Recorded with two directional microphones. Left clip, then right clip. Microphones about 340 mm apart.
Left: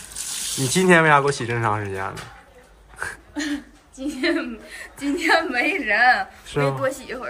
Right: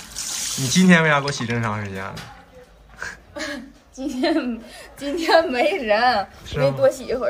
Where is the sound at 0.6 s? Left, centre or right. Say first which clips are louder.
Left 2 dB; centre.